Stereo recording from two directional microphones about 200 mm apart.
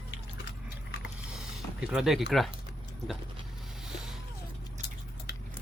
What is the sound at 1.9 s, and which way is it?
Speech, 5° right (ahead or behind).